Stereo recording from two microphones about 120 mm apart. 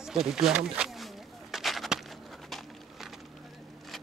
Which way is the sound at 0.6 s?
5° right (ahead or behind).